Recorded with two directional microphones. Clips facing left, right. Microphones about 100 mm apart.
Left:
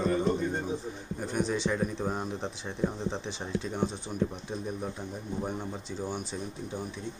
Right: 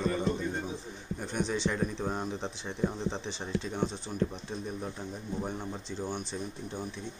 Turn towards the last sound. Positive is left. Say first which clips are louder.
# left 1 dB
turn(degrees=10)  # may be behind; listen again after turning